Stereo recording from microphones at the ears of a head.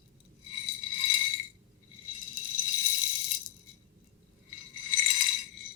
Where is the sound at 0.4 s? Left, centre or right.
Left.